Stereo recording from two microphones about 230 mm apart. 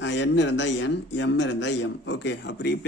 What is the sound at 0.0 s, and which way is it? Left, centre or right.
Speech, left.